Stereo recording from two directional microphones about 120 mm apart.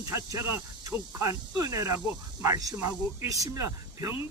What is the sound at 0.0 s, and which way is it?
Speech, 25° right (ahead or behind).